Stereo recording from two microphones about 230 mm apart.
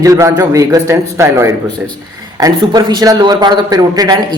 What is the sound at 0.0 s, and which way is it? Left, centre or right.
A woman's voice, centre.